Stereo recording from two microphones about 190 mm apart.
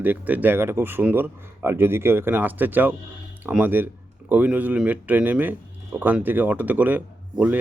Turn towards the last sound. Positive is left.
turn(degrees=-10)  # may be behind; listen again after turning